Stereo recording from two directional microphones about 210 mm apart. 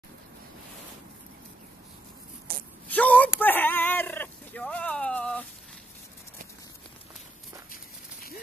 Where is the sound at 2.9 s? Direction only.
5° left (ahead or behind).